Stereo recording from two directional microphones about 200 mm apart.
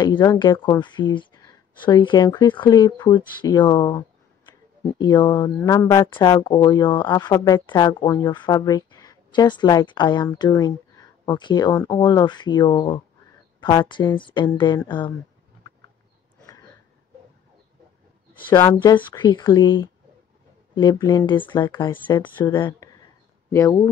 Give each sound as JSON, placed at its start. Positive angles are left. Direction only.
{"t": 0.0, "sound": "speech", "side_deg": 20}
{"t": 18.5, "sound": "speech", "side_deg": 15}